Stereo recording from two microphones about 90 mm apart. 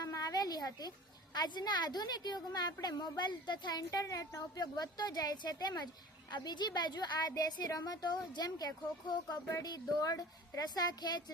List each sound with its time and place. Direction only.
0.0 s a woman's voice: 40° left (ahead or behind)